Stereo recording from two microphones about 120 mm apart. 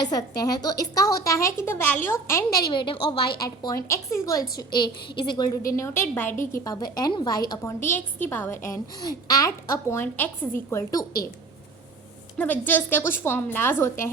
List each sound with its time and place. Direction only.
0.0 s a woman's voice: 35° left (ahead or behind)
2.5 s a woman's voice: 45° left (ahead or behind)
3.4 s a woman's voice: 30° left (ahead or behind)
4.5 s a woman's voice: 40° left (ahead or behind); by 6.7 s 20° left (ahead or behind)
6.7 s a woman's voice: 35° left (ahead or behind)
7.9 s a woman's voice: 15° left (ahead or behind)
12.4 s a woman's voice: 15° left (ahead or behind)